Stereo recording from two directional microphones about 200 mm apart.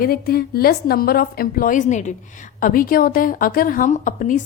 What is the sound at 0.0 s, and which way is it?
A woman's voice, 50° left (ahead or behind).